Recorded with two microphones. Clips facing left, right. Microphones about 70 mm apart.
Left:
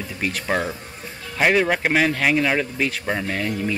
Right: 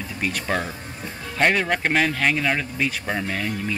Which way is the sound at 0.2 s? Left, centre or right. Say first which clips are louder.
Left 2 dB; centre.